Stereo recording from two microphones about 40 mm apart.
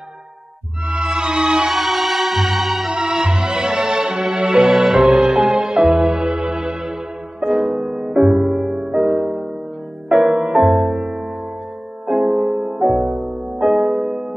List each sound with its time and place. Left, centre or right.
0.8 s music: right
1.7 s music: centre
2.9 s music: centre
7.4 s music: right
13.6 s music: centre